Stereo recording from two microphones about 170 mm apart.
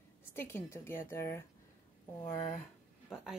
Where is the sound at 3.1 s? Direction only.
5° right (ahead or behind).